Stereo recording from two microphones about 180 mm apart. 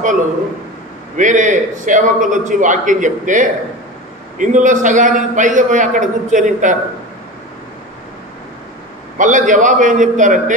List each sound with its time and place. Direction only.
1.1 s a man's voice: 45° right (ahead or behind)
9.2 s a man's voice: 45° right (ahead or behind)